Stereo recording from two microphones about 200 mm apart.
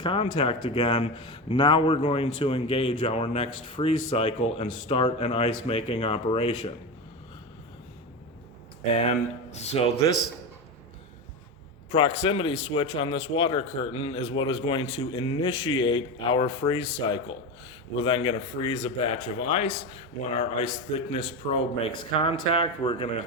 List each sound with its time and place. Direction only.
0.0 s a man's voice: 25° left (ahead or behind)
8.9 s speech: 30° left (ahead or behind)
11.9 s a man's voice: 30° left (ahead or behind)